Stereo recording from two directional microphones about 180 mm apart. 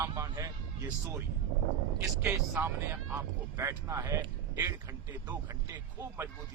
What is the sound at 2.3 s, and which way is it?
Speech, 10° right (ahead or behind).